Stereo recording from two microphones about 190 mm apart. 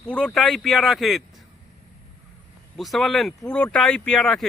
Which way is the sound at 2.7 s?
Centre (ahead or behind).